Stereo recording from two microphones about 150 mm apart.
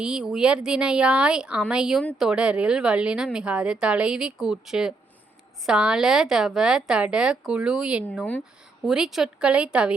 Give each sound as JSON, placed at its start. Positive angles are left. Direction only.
{"t": 0.0, "sound": "speech", "side_deg": -5}